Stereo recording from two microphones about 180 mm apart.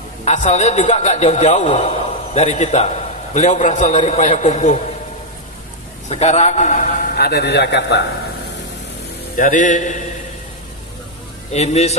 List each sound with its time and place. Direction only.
0.2 s a man's voice: 40° left (ahead or behind)
6.0 s a man's voice: 40° left (ahead or behind)
7.2 s a man's voice: 65° left (ahead or behind)
9.4 s a man's voice: 45° left (ahead or behind)
11.5 s a man's voice: 35° left (ahead or behind)